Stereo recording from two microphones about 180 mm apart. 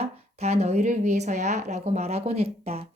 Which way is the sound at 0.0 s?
35° right (ahead or behind).